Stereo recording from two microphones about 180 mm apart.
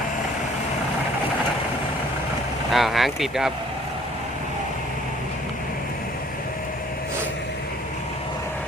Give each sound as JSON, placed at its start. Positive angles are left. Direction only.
{"t": 2.7, "sound": "speech", "side_deg": 0}